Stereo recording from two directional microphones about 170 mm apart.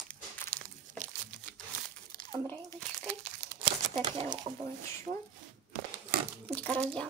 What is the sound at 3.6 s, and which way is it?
Crumpling, 30° right (ahead or behind).